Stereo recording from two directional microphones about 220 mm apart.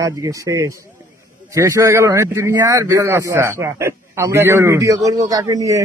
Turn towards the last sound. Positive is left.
turn(degrees=-15)  # may be behind; listen again after turning